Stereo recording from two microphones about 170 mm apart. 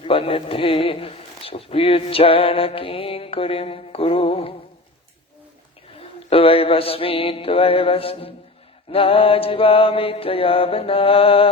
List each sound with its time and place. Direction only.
0.0 s speech: 30° left (ahead or behind)
6.0 s speech: 35° left (ahead or behind)